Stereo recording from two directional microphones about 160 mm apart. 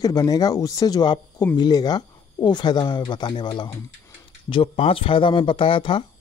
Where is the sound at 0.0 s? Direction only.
25° left (ahead or behind).